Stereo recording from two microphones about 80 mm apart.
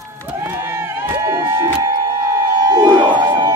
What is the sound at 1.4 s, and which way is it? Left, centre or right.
Music, right.